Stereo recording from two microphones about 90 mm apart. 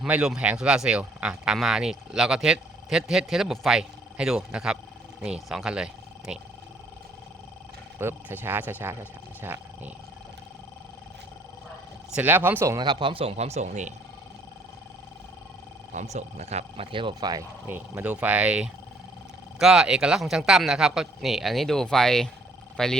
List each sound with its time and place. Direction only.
0.1 s speech: 10° right (ahead or behind)
7.9 s speech: 25° right (ahead or behind)
12.1 s speech: 20° right (ahead or behind)
12.8 s speech: 60° right (ahead or behind); by 13.3 s 80° right
16.7 s speech: 80° right
17.2 s speech: 45° right (ahead or behind)
17.7 s speech: 20° right (ahead or behind); by 22.9 s 5° left (ahead or behind)